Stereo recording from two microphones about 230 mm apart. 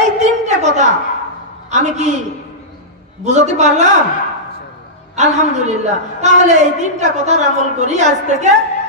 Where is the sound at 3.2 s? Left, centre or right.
Right.